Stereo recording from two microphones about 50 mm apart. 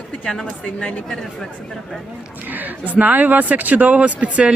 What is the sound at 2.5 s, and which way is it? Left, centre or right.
Speech, right.